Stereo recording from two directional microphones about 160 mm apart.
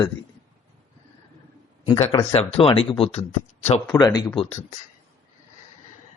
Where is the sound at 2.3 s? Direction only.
40° left (ahead or behind).